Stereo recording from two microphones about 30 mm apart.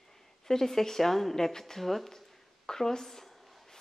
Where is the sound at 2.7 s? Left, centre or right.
Centre.